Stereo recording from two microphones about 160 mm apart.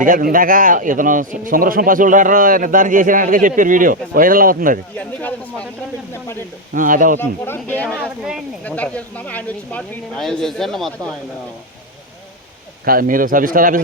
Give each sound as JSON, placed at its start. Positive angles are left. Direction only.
{"t": 0.0, "sound": "a man's voice", "side_deg": -60}
{"t": 4.9, "sound": "speech", "side_deg": 10}
{"t": 6.7, "sound": "a man's voice", "side_deg": -55}
{"t": 7.2, "sound": "speech", "side_deg": 15}
{"t": 7.9, "sound": "speech", "side_deg": -5}
{"t": 8.6, "sound": "speech", "side_deg": 10}
{"t": 12.8, "sound": "a man's voice", "side_deg": -65}